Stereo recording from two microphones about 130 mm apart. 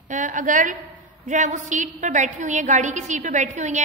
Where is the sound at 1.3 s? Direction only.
70° right (ahead or behind).